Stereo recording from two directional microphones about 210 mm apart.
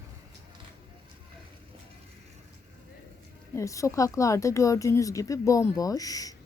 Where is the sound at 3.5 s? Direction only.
15° left (ahead or behind).